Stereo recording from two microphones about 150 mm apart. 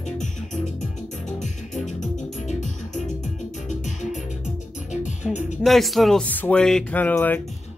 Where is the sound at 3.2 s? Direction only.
55° left (ahead or behind).